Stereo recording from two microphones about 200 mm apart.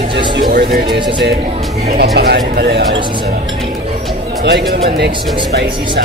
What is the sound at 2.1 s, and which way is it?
Speech, 55° right (ahead or behind).